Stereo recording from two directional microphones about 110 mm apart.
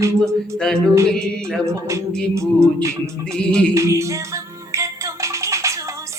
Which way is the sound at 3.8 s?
30° right (ahead or behind).